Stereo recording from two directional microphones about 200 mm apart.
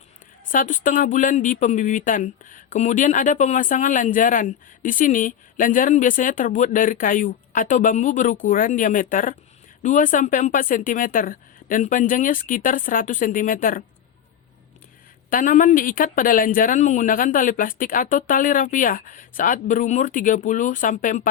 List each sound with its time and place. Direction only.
0.5 s speech: 40° left (ahead or behind)
15.3 s speech: 40° left (ahead or behind)